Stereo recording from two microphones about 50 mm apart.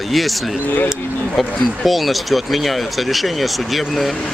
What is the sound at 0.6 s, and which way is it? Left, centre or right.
Speech, left.